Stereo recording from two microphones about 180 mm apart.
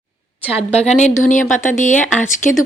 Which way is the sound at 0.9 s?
40° left (ahead or behind).